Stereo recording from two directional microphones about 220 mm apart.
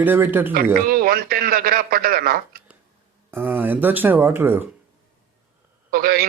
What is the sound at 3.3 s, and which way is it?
Speech, 10° right (ahead or behind).